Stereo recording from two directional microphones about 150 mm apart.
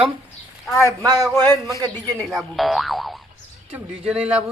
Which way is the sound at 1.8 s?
25° right (ahead or behind).